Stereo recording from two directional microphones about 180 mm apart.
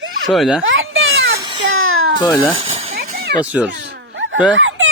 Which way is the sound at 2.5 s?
35° right (ahead or behind).